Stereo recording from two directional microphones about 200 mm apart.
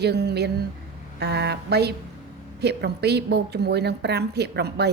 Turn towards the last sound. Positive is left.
turn(degrees=-55)  # may be behind; listen again after turning